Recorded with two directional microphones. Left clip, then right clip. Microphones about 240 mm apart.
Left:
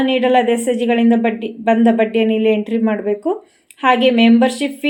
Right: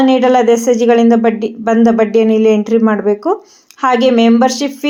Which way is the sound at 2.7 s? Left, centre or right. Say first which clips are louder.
Right 7 dB; right.